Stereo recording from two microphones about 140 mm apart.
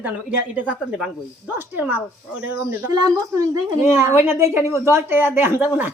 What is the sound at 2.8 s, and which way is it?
A woman's voice, 25° right (ahead or behind).